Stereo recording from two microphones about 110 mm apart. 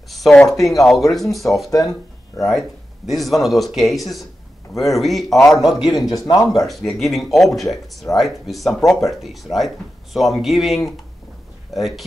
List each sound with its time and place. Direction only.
0.1 s speech: 5° left (ahead or behind)
6.1 s speech: 30° left (ahead or behind)
6.6 s speech: centre (ahead or behind)